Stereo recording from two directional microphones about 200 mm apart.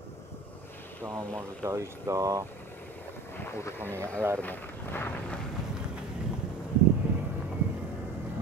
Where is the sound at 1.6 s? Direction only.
15° right (ahead or behind).